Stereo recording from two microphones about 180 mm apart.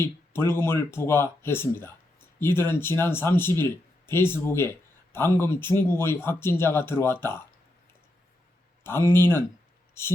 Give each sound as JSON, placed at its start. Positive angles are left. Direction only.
{"t": 0.0, "sound": "speech", "side_deg": 15}
{"t": 8.8, "sound": "speech", "side_deg": 15}